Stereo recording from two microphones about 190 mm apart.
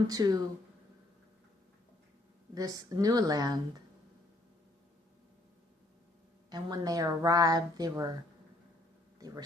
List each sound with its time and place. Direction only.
0.1 s a woman's voice: 20° right (ahead or behind)
2.6 s a woman's voice: 20° right (ahead or behind)
6.5 s a woman's voice: 20° right (ahead or behind)
9.1 s a sound: 20° right (ahead or behind)